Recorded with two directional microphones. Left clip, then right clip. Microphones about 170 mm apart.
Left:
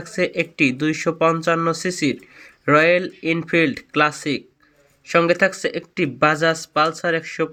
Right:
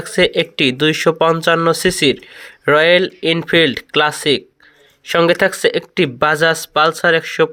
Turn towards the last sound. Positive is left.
turn(degrees=-25)  # may be behind; listen again after turning